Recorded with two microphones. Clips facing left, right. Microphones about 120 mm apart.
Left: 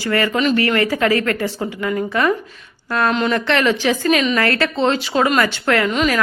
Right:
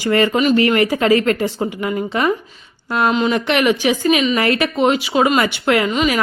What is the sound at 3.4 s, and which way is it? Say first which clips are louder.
Speech: right 1 dB; 15° right (ahead or behind).